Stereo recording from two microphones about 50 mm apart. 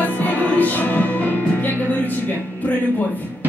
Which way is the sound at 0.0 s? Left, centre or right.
Left.